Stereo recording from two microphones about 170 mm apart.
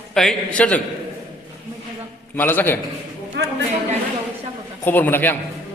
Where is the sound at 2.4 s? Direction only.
10° left (ahead or behind).